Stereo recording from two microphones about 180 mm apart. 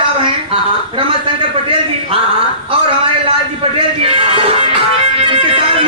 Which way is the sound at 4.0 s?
30° right (ahead or behind).